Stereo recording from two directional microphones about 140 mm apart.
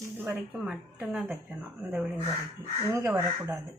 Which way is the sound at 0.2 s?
15° right (ahead or behind).